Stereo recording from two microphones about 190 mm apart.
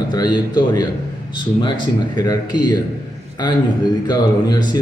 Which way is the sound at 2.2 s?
20° left (ahead or behind).